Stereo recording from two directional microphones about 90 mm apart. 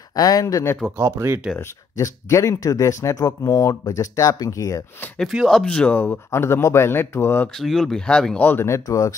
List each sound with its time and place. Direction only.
0.1 s speech: 45° left (ahead or behind)
0.9 s speech: 30° right (ahead or behind)
2.0 s speech: 35° left (ahead or behind)
5.2 s speech: centre (ahead or behind)
6.0 s speech: 25° left (ahead or behind)
7.6 s speech: 5° left (ahead or behind)
8.4 s speech: 20° left (ahead or behind)
8.6 s speech: 35° left (ahead or behind)